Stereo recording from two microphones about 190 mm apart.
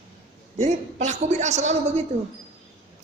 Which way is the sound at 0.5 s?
35° right (ahead or behind).